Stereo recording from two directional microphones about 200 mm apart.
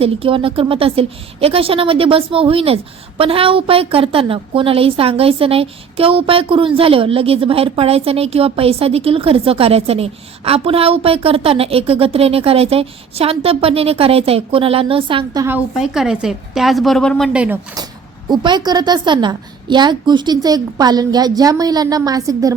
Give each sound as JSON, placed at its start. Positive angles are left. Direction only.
{"t": 0.0, "sound": "a woman's voice", "side_deg": -25}
{"t": 15.4, "sound": "a woman's voice", "side_deg": -5}
{"t": 18.3, "sound": "a woman's voice", "side_deg": -20}